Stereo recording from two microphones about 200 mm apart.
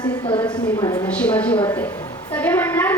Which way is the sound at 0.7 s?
15° left (ahead or behind).